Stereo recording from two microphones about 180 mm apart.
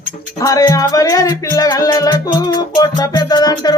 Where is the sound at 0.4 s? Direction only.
20° left (ahead or behind).